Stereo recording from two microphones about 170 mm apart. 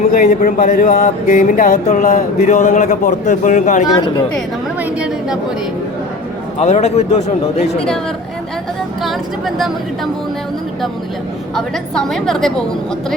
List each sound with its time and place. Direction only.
0.1 s speech: 50° left (ahead or behind)
4.8 s a woman's voice: 5° right (ahead or behind)
6.6 s speech: 45° left (ahead or behind)
11.5 s a woman's voice: centre (ahead or behind)